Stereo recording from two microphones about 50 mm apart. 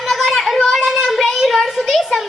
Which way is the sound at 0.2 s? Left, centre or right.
Centre.